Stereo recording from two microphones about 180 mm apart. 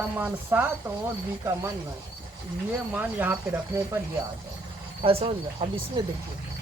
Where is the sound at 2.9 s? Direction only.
10° right (ahead or behind).